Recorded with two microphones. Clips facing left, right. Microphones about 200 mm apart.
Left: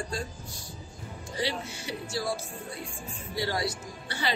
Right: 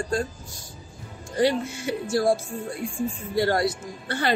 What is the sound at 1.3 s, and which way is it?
Speech, 50° right (ahead or behind).